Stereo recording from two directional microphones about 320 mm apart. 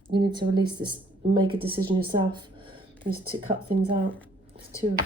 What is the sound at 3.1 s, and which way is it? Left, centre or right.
Speech, right.